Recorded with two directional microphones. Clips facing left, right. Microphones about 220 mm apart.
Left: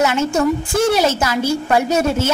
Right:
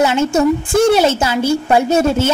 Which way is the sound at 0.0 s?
30° right (ahead or behind).